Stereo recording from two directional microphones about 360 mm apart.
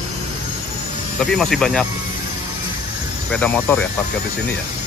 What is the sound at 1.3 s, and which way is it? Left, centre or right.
Speech, centre.